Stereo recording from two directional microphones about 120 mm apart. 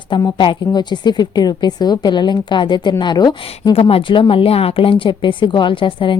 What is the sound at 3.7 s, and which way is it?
Speech, 50° left (ahead or behind).